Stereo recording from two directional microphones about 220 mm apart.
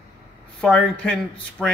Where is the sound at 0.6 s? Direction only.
5° left (ahead or behind).